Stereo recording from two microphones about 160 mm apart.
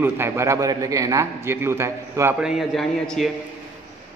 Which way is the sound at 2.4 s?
Centre (ahead or behind).